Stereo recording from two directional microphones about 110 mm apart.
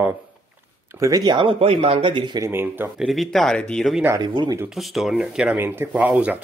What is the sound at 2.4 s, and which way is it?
Speech, 20° right (ahead or behind).